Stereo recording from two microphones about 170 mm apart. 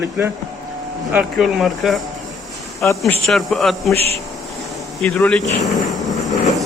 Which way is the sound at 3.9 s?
35° right (ahead or behind).